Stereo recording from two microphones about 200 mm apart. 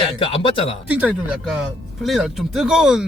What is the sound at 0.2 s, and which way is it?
Speech, 25° left (ahead or behind).